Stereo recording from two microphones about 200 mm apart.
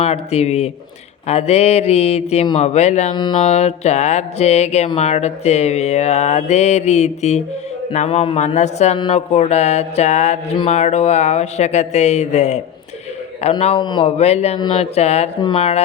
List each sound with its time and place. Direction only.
0.0 s mantra: 30° left (ahead or behind)
15.4 s speech: 25° left (ahead or behind)